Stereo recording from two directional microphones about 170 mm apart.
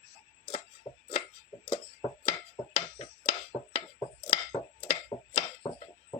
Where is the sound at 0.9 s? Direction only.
35° left (ahead or behind).